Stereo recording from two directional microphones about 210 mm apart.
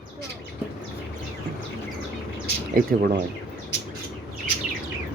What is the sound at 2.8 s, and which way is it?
Speech, 45° right (ahead or behind).